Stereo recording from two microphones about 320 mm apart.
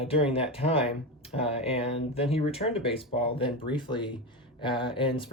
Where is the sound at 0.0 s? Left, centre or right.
Centre.